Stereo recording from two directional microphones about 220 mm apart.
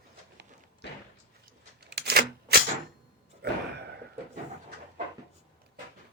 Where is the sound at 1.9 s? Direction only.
45° right (ahead or behind).